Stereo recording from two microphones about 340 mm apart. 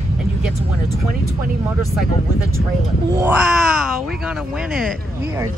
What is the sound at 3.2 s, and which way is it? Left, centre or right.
Speech, centre.